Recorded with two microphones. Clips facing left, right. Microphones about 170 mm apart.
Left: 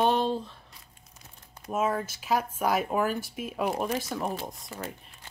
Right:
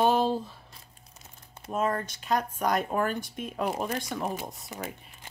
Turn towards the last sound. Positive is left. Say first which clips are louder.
# even
turn(degrees=-15)  # may be behind; listen again after turning